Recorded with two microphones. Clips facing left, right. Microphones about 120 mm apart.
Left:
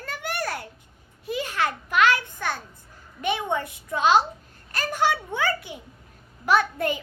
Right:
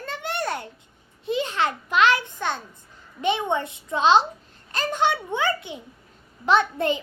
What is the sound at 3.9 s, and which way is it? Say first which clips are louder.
A child's voice: right 2 dB; 25° right (ahead or behind).